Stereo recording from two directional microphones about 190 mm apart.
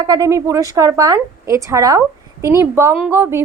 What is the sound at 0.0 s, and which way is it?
A woman's voice, 20° right (ahead or behind).